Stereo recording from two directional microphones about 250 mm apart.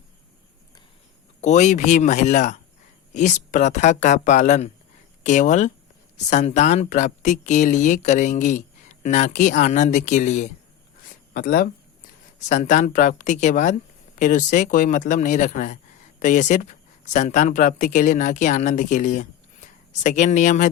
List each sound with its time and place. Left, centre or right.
1.4 s speech: left